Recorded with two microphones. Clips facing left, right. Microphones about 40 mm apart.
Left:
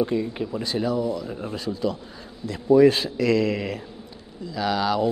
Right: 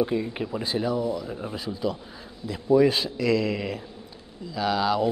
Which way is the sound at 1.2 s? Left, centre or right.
Centre.